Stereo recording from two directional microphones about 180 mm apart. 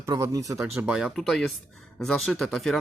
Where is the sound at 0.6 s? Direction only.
5° right (ahead or behind).